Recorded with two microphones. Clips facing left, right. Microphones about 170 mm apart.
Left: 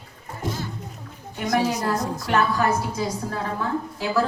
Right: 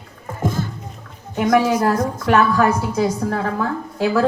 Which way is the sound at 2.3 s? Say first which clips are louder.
Right 5 dB; 65° right (ahead or behind).